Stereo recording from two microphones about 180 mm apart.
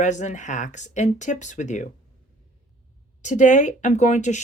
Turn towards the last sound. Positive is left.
turn(degrees=40)  # may be behind; listen again after turning